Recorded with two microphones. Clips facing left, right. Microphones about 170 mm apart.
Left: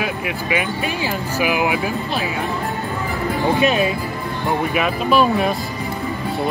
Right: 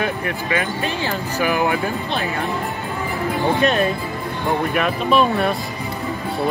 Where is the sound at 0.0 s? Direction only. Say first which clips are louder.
Right 1 dB; 10° left (ahead or behind).